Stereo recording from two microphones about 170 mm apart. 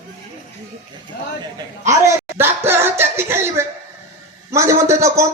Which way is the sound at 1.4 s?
20° right (ahead or behind).